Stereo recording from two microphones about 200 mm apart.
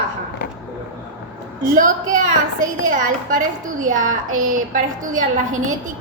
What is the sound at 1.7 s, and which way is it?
A woman's voice, 40° right (ahead or behind).